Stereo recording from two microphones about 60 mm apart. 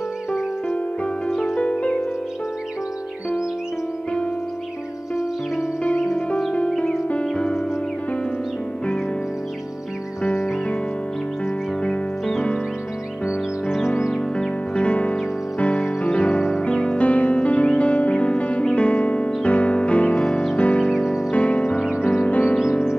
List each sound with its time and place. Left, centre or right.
1.3 s music: centre
6.5 s music: centre
11.8 s music: centre
14.3 s music: centre
20.8 s music: centre
21.3 s music: left